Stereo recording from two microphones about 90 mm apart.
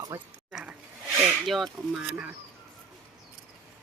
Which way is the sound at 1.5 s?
Centre (ahead or behind).